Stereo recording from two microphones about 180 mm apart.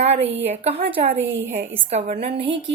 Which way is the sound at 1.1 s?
85° right.